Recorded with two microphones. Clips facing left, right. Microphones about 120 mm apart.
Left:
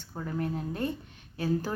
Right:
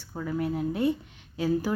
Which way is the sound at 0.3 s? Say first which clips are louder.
Right 4 dB; 10° right (ahead or behind).